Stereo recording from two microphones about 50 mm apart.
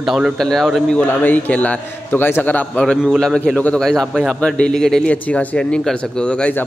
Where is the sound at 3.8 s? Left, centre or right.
Centre.